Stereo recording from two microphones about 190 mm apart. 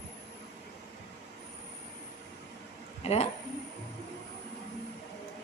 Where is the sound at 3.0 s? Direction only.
35° left (ahead or behind).